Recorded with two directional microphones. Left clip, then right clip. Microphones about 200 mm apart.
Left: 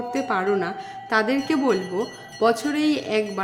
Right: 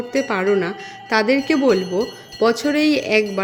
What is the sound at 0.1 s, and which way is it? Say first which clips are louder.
Speech: right 5 dB; 20° right (ahead or behind).